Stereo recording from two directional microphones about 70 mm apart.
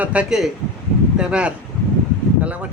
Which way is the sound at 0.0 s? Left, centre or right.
Centre.